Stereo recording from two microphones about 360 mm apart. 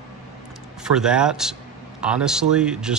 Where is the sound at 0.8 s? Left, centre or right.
Centre.